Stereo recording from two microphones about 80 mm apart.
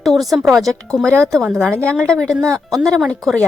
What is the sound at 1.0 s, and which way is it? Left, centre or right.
Speech, right.